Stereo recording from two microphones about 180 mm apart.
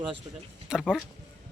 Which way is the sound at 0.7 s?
Centre (ahead or behind).